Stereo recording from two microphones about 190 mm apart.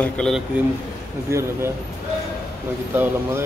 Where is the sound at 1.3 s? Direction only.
15° right (ahead or behind).